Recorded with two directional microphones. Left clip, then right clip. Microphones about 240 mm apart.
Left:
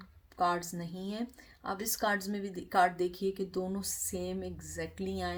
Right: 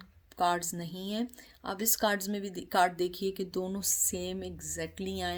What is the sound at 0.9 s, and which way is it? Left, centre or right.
Speech, right.